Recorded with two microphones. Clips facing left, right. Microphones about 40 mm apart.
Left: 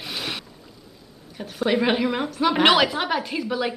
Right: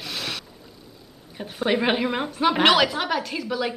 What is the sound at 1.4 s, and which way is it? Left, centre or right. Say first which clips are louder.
Speech: left 1 dB; centre.